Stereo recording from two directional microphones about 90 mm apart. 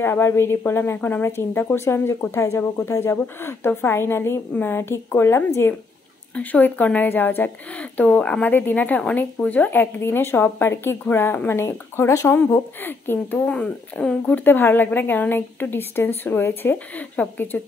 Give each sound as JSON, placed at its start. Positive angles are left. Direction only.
{"t": 0.0, "sound": "speech", "side_deg": 25}
{"t": 13.5, "sound": "speech", "side_deg": 10}